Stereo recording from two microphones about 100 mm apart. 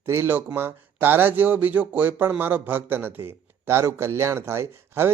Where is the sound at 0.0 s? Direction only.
25° right (ahead or behind).